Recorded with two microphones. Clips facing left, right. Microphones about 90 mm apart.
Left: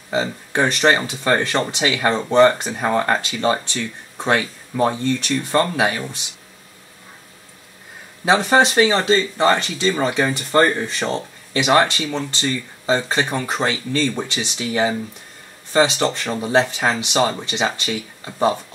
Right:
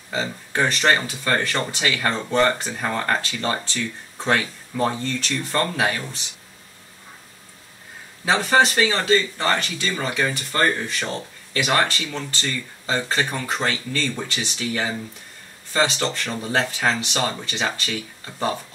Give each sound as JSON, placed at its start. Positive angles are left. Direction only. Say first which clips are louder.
{"t": 0.1, "sound": "speech", "louder": "left 5 dB", "side_deg": 20}
{"t": 8.3, "sound": "speech", "louder": "left 3 dB", "side_deg": 20}